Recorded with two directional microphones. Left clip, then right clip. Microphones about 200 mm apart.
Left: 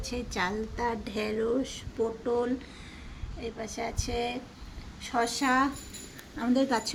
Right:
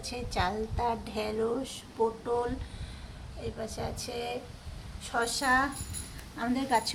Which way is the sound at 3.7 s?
10° left (ahead or behind).